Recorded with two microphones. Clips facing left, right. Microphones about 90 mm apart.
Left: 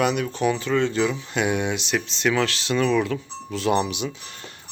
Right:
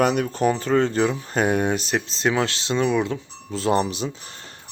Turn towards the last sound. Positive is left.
turn(degrees=-35)  # may be behind; listen again after turning